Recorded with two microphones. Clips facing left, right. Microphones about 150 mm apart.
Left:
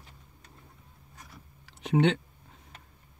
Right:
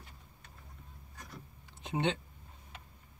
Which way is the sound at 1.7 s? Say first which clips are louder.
Left 8 dB; 80° left.